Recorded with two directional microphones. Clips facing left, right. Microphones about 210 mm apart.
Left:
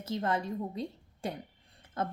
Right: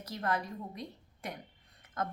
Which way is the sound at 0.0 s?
25° left (ahead or behind).